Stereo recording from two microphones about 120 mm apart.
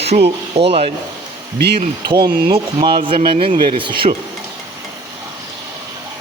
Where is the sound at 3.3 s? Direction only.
70° right (ahead or behind).